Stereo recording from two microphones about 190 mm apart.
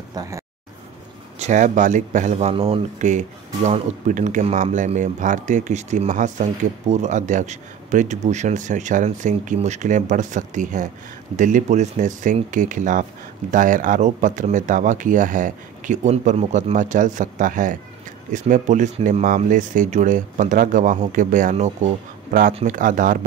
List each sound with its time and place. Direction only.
0.1 s speech: 20° right (ahead or behind)
1.4 s speech: 40° right (ahead or behind)
22.8 s speech: 45° right (ahead or behind)